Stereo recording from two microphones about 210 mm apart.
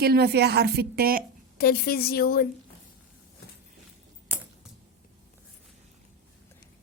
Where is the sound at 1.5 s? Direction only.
50° left (ahead or behind).